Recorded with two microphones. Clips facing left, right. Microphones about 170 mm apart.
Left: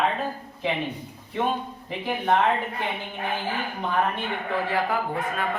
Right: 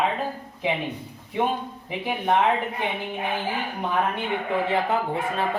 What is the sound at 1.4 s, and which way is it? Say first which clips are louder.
Speech: right 1 dB; 15° right (ahead or behind).